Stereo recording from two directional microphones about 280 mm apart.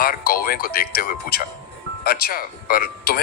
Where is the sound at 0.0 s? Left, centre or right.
Left.